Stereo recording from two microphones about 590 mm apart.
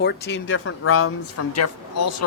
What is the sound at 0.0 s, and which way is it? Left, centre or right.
Speech, centre.